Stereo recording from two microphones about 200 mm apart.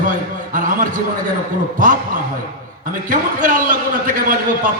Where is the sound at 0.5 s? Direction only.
40° right (ahead or behind).